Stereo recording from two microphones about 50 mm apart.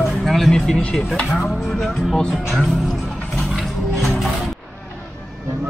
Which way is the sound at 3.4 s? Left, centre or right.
Centre.